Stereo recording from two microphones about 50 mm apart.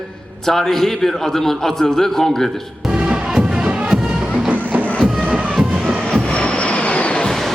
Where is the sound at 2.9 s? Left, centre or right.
Right.